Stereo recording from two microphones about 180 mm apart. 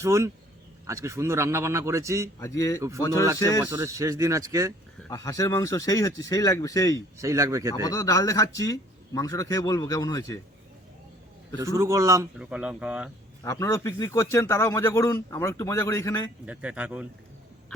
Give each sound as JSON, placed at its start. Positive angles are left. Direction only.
{"t": 0.0, "sound": "a man's voice", "side_deg": -15}
{"t": 2.4, "sound": "speech", "side_deg": 15}
{"t": 3.6, "sound": "a man's voice", "side_deg": -10}
{"t": 5.0, "sound": "speech", "side_deg": 20}
{"t": 7.2, "sound": "a man's voice", "side_deg": -15}
{"t": 7.9, "sound": "speech", "side_deg": 20}
{"t": 11.6, "sound": "a man's voice", "side_deg": -15}
{"t": 12.4, "sound": "a man's voice", "side_deg": -5}
{"t": 13.4, "sound": "speech", "side_deg": 15}
{"t": 16.5, "sound": "a man's voice", "side_deg": -5}